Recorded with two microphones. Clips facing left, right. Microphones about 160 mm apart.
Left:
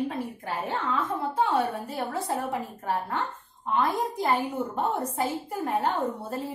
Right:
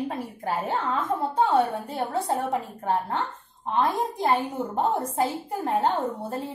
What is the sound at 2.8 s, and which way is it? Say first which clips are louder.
Speech: right 3 dB; 30° right (ahead or behind).